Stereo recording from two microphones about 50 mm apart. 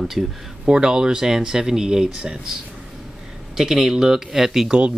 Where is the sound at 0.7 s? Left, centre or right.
Centre.